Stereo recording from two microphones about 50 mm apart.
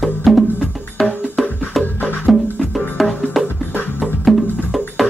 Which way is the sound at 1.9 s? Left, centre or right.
Left.